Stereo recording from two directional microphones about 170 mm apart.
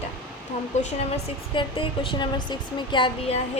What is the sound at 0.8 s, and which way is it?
Speech, 40° left (ahead or behind).